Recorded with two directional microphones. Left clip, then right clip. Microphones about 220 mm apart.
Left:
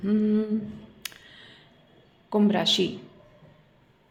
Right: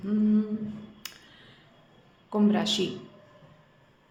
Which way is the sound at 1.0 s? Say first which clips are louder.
Left 8 dB; 20° left (ahead or behind).